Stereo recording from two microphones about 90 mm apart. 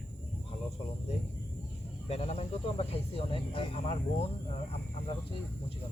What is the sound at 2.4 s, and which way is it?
Speech, 90° left.